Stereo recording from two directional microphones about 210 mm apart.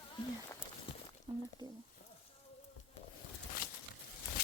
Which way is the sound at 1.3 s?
25° right (ahead or behind).